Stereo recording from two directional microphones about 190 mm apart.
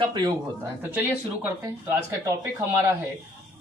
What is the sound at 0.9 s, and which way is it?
Speech, 10° right (ahead or behind).